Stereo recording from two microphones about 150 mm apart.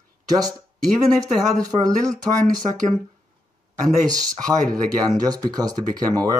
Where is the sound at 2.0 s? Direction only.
25° right (ahead or behind).